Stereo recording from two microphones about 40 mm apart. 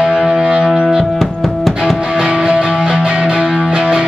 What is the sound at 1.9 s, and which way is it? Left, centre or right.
Music, right.